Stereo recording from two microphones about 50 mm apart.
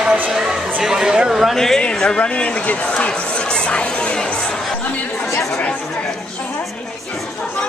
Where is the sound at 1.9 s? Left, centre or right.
Centre.